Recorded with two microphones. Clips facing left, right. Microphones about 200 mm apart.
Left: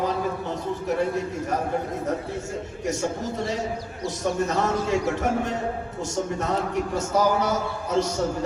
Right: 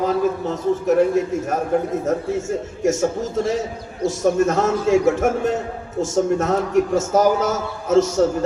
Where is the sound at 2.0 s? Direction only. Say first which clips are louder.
Right 7 dB; 45° right (ahead or behind).